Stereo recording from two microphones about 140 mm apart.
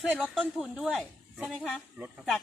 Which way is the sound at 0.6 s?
Centre (ahead or behind).